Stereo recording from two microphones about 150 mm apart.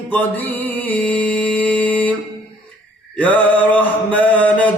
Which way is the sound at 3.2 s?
10° left (ahead or behind).